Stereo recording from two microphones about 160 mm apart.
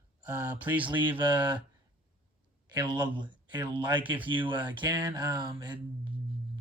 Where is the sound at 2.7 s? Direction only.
30° right (ahead or behind).